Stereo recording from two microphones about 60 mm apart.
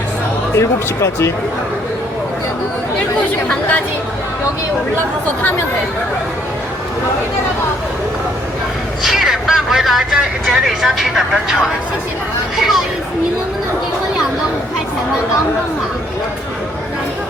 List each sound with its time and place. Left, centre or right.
0.5 s speech: left
3.5 s a woman's voice: left
9.0 s speech: centre